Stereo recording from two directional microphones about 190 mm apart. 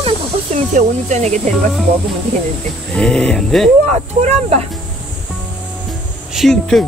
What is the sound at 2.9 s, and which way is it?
Speech, 5° left (ahead or behind).